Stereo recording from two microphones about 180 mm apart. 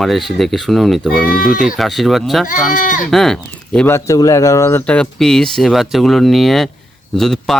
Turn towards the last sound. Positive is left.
turn(degrees=0)  # may be behind; listen again after turning